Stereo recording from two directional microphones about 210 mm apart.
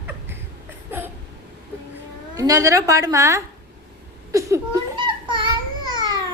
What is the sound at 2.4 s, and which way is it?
A woman's voice, 15° right (ahead or behind).